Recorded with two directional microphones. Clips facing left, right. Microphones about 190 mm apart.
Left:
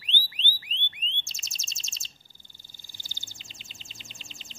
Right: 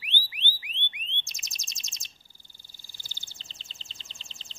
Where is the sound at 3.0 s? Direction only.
15° left (ahead or behind).